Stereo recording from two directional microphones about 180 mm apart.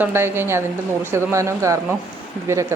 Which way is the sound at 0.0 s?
15° right (ahead or behind).